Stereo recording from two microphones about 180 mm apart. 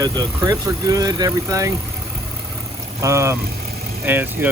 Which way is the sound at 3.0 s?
15° right (ahead or behind).